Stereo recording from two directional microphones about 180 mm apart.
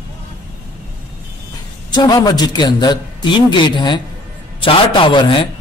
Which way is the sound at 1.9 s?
20° left (ahead or behind).